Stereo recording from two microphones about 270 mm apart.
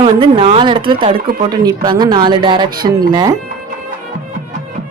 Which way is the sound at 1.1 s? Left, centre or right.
Right.